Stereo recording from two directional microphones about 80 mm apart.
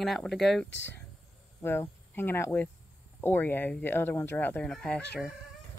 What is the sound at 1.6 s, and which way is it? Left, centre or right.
Speech, left.